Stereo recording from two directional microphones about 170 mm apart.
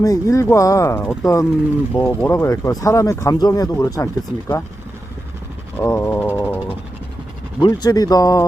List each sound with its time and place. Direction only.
0.0 s speech: 20° left (ahead or behind)
5.7 s a sound: 15° left (ahead or behind)
7.6 s speech: 25° left (ahead or behind)